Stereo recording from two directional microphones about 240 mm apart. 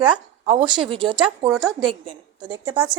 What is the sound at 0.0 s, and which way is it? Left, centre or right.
Speech, right.